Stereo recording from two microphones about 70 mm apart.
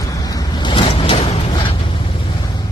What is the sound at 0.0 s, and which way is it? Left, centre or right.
Vehicle, left.